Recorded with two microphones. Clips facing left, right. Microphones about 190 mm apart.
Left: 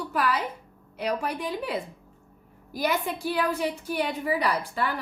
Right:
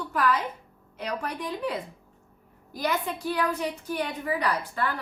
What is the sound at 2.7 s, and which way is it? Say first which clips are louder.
A woman's voice: left 2 dB; 10° left (ahead or behind).